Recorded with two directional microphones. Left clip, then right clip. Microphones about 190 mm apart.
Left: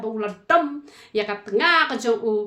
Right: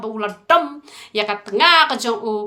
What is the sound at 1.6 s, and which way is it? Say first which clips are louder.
Speech: right 5 dB; 50° left (ahead or behind).